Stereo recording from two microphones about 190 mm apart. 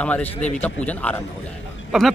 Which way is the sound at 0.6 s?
5° left (ahead or behind).